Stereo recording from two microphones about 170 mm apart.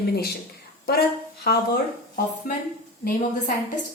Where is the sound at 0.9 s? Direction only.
65° left (ahead or behind).